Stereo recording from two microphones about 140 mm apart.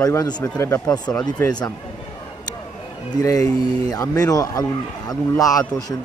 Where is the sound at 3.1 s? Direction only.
25° left (ahead or behind).